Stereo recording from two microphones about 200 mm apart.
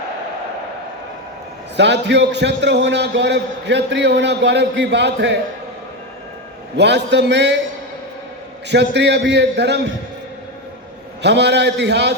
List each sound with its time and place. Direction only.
1.7 s a man's voice: 60° right (ahead or behind)
6.7 s a man's voice: 60° right (ahead or behind)
8.7 s a man's voice: 60° right (ahead or behind)
11.2 s a man's voice: 60° right (ahead or behind)